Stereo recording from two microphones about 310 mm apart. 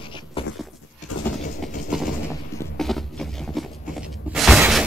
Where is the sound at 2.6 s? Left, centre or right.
Centre.